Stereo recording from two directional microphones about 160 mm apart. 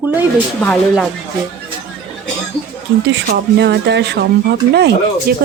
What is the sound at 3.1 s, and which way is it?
Speech, 90° right.